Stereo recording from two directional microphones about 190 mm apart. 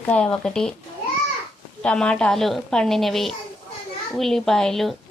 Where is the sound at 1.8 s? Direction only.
5° left (ahead or behind).